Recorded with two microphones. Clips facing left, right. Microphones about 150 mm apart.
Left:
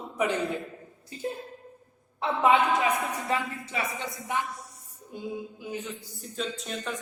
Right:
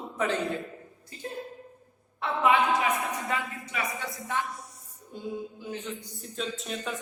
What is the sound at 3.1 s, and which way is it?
Speech, 30° left (ahead or behind).